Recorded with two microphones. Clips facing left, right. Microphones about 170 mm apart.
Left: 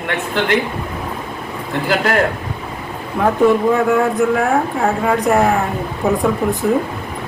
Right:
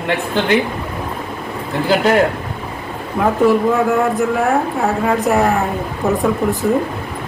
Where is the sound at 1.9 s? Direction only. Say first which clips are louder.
Right 3 dB; 20° right (ahead or behind).